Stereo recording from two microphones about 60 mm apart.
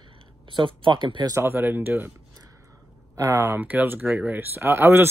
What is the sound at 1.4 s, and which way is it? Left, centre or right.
Speech, right.